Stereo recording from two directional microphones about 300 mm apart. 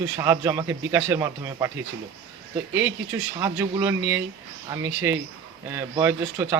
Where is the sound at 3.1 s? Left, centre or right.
Centre.